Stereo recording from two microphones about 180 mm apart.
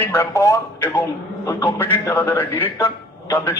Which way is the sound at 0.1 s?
15° left (ahead or behind).